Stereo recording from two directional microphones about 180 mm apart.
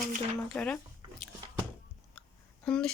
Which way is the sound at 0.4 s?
5° left (ahead or behind).